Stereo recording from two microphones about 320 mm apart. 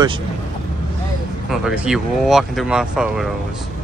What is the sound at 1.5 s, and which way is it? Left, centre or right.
Speech, centre.